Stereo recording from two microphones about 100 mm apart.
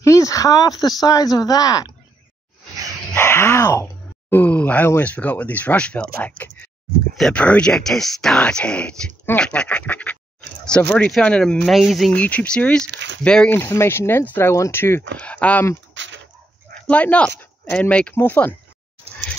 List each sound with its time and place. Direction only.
0.0 s speech: 30° left (ahead or behind)
3.2 s speech: 25° left (ahead or behind)
4.3 s speech: 15° left (ahead or behind)
6.2 s a sound: 15° left (ahead or behind)
7.2 s speech: 10° left (ahead or behind)
11.7 s speech: centre (ahead or behind)
12.1 s speech: 15° left (ahead or behind)
13.5 s speech: 25° left (ahead or behind)
15.1 s speech: 15° left (ahead or behind)
16.8 s speech: 15° left (ahead or behind)